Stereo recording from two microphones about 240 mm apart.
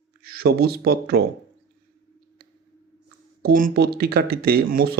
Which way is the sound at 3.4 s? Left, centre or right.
Right.